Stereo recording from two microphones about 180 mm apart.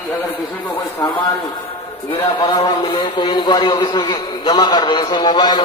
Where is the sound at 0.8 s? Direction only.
25° left (ahead or behind).